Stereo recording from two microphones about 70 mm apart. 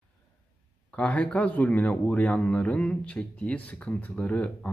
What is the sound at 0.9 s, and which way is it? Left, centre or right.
Speech, centre.